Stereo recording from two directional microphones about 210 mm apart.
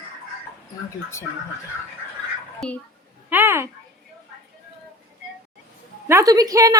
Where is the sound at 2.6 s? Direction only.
5° left (ahead or behind).